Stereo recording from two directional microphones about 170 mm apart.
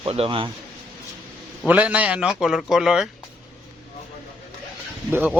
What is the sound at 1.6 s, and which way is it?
Speech, 10° right (ahead or behind).